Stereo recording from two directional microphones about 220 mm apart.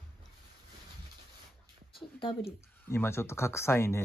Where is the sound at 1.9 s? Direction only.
25° left (ahead or behind).